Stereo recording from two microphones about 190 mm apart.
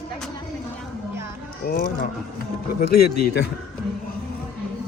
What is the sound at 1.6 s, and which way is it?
Speech, 50° left (ahead or behind).